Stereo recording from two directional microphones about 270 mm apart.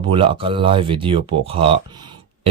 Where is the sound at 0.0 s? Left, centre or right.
Centre.